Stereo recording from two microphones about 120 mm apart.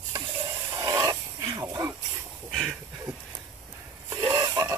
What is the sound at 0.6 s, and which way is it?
Hiss, 30° right (ahead or behind).